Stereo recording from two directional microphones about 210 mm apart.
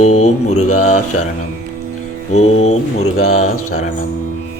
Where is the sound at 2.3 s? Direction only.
30° left (ahead or behind).